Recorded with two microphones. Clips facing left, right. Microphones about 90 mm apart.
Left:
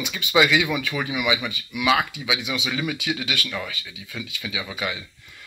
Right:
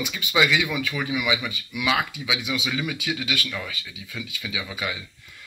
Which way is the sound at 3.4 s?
20° left (ahead or behind).